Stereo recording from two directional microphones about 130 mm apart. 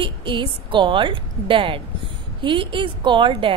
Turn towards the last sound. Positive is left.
turn(degrees=-40)  # may be behind; listen again after turning